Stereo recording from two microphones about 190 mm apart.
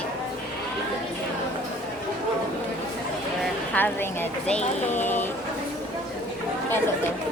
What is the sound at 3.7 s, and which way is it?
Speech, 10° left (ahead or behind).